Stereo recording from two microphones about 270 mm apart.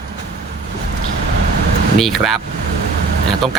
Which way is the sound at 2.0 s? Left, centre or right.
Centre.